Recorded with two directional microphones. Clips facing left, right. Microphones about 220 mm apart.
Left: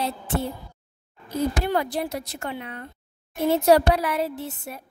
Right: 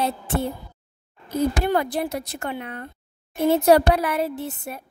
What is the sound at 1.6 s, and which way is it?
A woman's voice, 55° right (ahead or behind).